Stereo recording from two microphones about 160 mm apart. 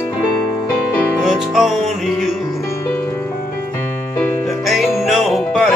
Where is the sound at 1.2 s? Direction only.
Centre (ahead or behind).